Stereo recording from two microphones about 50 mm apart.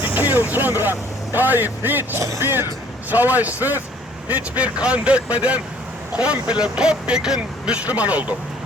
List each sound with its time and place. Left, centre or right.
0.0 s speech: right
2.1 s speech: right
2.4 s speech: right
3.1 s speech: right